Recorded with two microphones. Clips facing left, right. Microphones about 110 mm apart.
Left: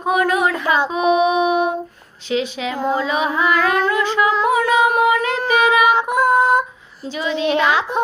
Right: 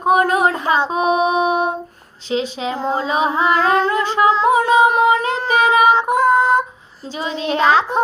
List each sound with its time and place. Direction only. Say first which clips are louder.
0.0 s a sound: right 3 dB; 35° right (ahead or behind)
2.2 s female singing: even; 30° right (ahead or behind)
7.2 s a woman's voice: left 1 dB; 35° right (ahead or behind)